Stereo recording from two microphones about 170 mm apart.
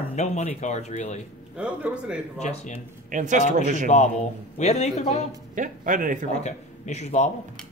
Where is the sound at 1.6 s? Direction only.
5° right (ahead or behind).